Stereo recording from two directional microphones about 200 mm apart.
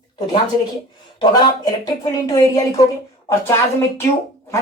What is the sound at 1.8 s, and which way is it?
Speech, 20° left (ahead or behind).